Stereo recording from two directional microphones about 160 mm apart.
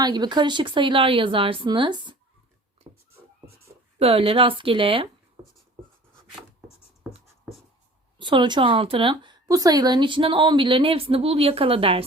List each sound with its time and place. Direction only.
0.0 s a woman's voice: 25° right (ahead or behind)
2.8 s cat: 30° right (ahead or behind)
3.9 s a woman's voice: 35° right (ahead or behind)
8.2 s a woman's voice: 30° right (ahead or behind)